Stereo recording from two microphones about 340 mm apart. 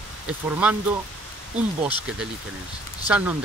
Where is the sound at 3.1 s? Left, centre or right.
Centre.